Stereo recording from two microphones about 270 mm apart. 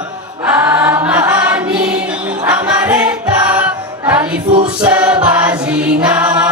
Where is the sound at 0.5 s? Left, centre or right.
Centre.